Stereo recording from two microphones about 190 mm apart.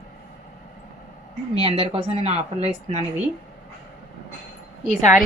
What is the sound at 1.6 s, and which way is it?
A woman's voice, 30° right (ahead or behind).